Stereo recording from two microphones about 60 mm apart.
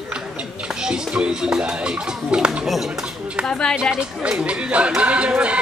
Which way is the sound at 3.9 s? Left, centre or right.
Centre.